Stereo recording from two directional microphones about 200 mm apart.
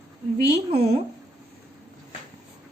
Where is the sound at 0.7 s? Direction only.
30° right (ahead or behind).